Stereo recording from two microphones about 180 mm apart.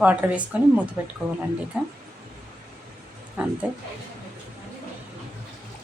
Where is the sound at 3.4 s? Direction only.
5° right (ahead or behind).